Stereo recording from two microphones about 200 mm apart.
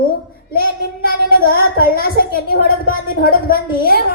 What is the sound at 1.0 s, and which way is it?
A woman's voice, 45° left (ahead or behind).